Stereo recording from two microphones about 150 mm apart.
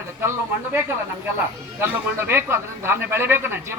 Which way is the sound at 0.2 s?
15° right (ahead or behind).